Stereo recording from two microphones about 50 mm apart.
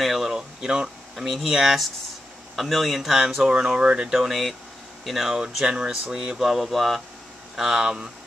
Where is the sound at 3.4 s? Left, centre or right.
Centre.